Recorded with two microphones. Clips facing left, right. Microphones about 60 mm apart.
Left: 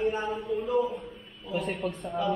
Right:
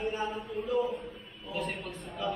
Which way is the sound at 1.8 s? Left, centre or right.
Left.